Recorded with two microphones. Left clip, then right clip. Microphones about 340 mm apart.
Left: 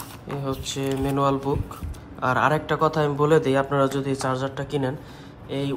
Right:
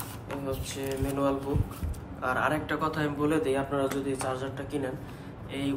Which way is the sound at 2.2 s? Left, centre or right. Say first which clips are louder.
Left 7 dB; centre.